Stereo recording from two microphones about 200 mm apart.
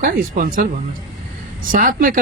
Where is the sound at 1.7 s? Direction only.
45° right (ahead or behind).